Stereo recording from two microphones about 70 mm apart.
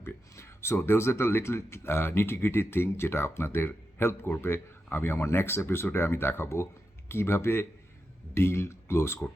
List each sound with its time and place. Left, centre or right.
0.0 s speech: left